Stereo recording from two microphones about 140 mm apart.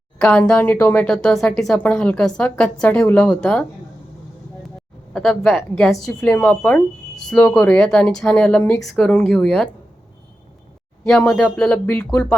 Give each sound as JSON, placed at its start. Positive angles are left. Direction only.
{"t": 0.2, "sound": "speech", "side_deg": 10}
{"t": 5.1, "sound": "speech", "side_deg": 5}
{"t": 11.0, "sound": "speech", "side_deg": 10}